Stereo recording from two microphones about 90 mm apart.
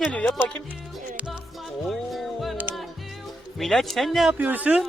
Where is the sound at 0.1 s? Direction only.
15° left (ahead or behind).